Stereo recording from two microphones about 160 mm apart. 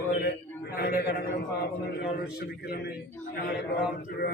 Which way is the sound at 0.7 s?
70° left (ahead or behind).